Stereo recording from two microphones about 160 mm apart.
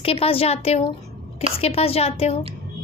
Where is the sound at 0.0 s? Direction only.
35° left (ahead or behind).